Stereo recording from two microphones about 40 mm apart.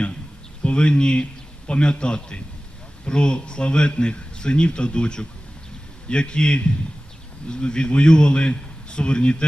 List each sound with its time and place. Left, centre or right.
0.6 s a man's voice: left